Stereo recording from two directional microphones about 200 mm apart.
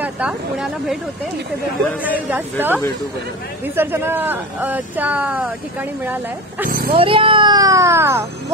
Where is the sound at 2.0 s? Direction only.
10° right (ahead or behind).